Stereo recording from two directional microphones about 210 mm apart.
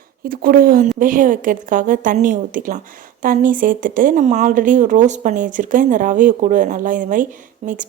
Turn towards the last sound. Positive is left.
turn(degrees=-35)  # may be behind; listen again after turning